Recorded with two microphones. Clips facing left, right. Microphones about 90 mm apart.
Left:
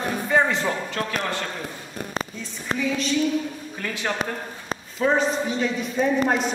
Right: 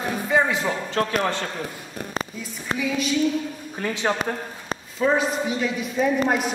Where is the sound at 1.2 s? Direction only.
25° right (ahead or behind).